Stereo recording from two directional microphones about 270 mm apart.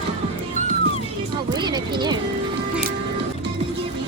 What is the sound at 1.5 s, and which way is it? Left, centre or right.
Speech, centre.